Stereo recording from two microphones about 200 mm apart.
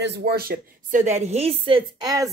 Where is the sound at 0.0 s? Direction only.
55° right (ahead or behind).